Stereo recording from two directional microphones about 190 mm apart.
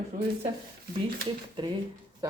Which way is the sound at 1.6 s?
25° right (ahead or behind).